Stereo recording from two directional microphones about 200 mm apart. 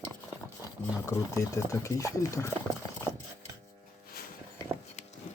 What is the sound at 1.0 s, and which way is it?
Speech, 15° left (ahead or behind).